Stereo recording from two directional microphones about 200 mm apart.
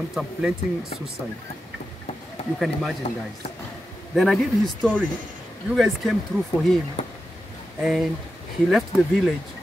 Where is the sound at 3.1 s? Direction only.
35° left (ahead or behind).